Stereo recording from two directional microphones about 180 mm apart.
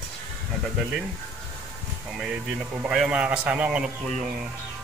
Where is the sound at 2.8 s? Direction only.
5° right (ahead or behind).